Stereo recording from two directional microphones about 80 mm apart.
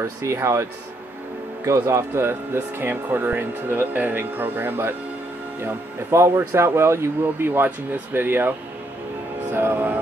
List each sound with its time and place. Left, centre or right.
0.0 s speech: right
9.5 s music: right